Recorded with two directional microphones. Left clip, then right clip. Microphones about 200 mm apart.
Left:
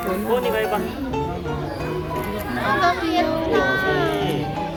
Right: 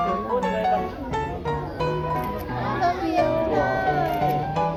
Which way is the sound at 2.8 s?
5° right (ahead or behind).